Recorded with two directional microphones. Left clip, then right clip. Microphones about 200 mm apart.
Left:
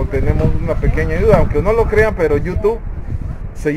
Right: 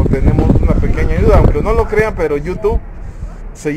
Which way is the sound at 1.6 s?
10° right (ahead or behind).